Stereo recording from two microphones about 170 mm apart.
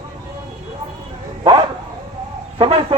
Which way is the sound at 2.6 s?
30° right (ahead or behind).